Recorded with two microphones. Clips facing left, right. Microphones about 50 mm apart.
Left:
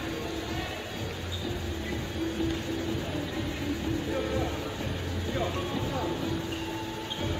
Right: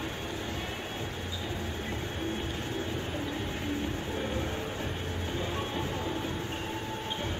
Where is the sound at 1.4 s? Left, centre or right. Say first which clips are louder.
Left 3 dB; right.